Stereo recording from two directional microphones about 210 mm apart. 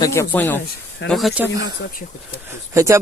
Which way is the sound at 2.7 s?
15° right (ahead or behind).